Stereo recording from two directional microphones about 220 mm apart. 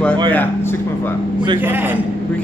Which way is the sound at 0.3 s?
10° left (ahead or behind).